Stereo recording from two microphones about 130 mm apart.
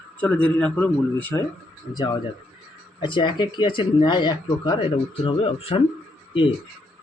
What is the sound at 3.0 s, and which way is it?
Speech, 40° left (ahead or behind).